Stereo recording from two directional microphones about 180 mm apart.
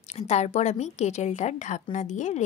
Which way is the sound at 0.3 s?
35° left (ahead or behind).